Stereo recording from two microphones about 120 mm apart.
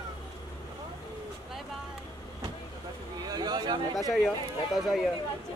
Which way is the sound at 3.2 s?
35° right (ahead or behind).